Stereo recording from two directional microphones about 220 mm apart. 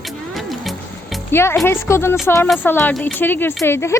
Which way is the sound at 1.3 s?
10° left (ahead or behind).